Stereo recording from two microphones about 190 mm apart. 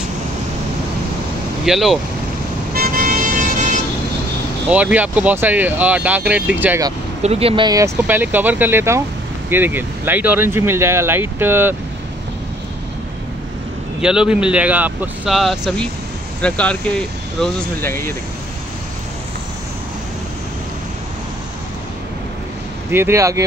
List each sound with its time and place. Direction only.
1.7 s speech: centre (ahead or behind)
2.7 s vehicle: 50° right (ahead or behind)
4.6 s speech: 5° right (ahead or behind)
7.2 s speech: 30° right (ahead or behind); by 11.7 s 10° right (ahead or behind)
14.0 s speech: 5° right (ahead or behind)
22.8 s speech: 10° right (ahead or behind)